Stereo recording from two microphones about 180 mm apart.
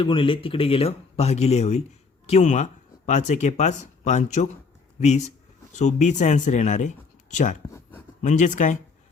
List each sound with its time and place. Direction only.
0.0 s speech: 30° left (ahead or behind); by 8.8 s 45° left (ahead or behind)